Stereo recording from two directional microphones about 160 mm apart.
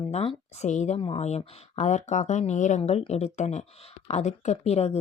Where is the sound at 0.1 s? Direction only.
40° left (ahead or behind).